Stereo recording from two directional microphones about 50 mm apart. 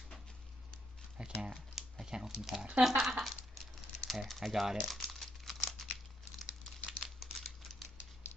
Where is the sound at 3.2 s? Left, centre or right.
Centre.